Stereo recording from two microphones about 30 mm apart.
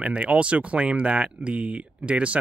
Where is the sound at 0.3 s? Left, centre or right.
Right.